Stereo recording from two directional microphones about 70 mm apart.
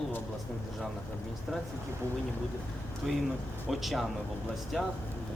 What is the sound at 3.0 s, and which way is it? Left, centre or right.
A man's voice, centre.